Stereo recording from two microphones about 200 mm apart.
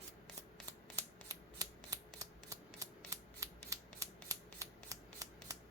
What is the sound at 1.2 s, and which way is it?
Scissors, 15° right (ahead or behind).